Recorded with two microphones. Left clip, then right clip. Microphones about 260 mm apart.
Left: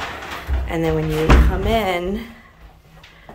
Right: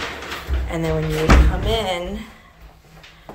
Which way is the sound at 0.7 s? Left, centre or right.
Centre.